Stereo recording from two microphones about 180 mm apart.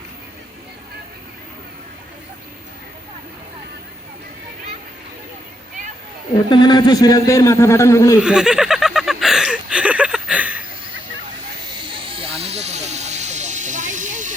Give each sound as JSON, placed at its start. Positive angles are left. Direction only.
{"t": 6.5, "sound": "a man's voice", "side_deg": 20}
{"t": 8.2, "sound": "snicker", "side_deg": -5}
{"t": 11.7, "sound": "hiss", "side_deg": -30}